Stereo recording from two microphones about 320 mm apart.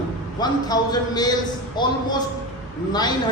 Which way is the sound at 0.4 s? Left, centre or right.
Centre.